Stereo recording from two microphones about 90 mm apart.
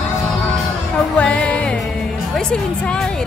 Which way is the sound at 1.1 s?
15° left (ahead or behind).